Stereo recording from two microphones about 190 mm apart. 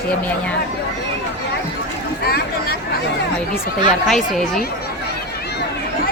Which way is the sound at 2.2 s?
55° left (ahead or behind).